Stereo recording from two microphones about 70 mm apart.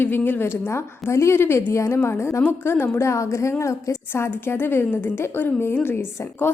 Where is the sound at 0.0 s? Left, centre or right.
Left.